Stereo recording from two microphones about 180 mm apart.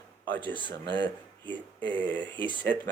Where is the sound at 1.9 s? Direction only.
10° left (ahead or behind).